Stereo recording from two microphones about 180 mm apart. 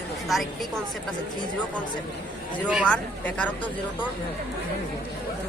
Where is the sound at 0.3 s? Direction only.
Centre (ahead or behind).